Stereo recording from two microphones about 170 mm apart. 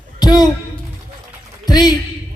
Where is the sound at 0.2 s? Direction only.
25° left (ahead or behind).